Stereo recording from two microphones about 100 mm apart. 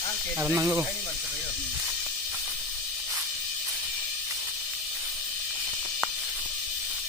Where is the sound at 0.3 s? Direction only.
20° right (ahead or behind).